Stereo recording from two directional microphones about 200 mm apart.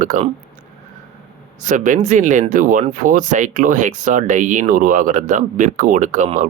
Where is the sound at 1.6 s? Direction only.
40° right (ahead or behind).